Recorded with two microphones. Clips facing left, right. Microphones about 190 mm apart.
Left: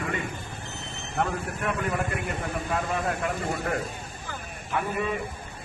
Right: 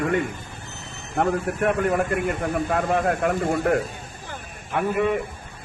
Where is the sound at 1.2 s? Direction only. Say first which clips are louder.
Right 7 dB; 50° right (ahead or behind).